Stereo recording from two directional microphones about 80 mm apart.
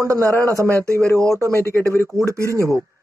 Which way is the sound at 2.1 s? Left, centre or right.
Right.